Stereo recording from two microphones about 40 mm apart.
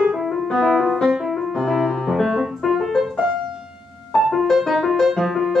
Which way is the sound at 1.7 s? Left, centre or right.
Centre.